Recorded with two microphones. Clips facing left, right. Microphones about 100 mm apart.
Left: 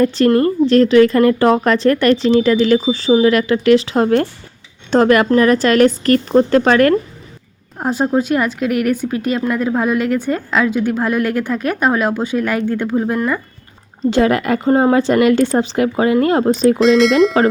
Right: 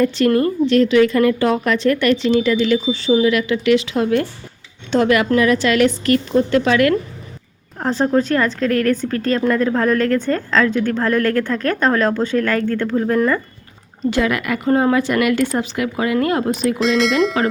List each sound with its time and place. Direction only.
0.0 s speech: 35° left (ahead or behind)
7.8 s speech: 10° left (ahead or behind)
14.0 s speech: 35° left (ahead or behind)
16.8 s speech: centre (ahead or behind)